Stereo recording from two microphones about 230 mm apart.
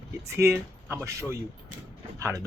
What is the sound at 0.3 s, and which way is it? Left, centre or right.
Speech, centre.